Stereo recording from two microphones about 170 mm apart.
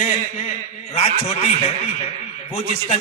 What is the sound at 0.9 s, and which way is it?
A man's voice, 35° left (ahead or behind).